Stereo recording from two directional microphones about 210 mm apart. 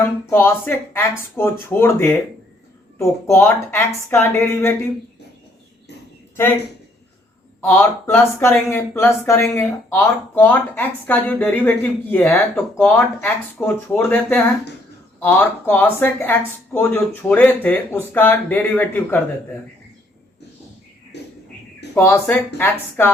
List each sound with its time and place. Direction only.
0.0 s speech: 10° left (ahead or behind)
7.7 s speech: 10° left (ahead or behind)
21.1 s a sound: 55° left (ahead or behind)
21.9 s speech: 10° left (ahead or behind)